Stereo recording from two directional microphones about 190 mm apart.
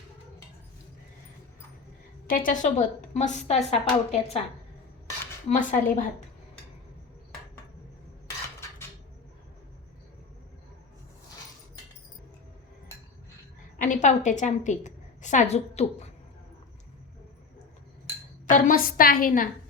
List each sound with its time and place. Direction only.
2.2 s speech: 45° left (ahead or behind)
5.5 s a woman's voice: 40° left (ahead or behind)
13.7 s a woman's voice: 45° left (ahead or behind)
18.4 s a woman's voice: 45° left (ahead or behind)